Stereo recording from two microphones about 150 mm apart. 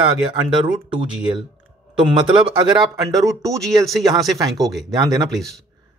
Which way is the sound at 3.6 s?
Centre (ahead or behind).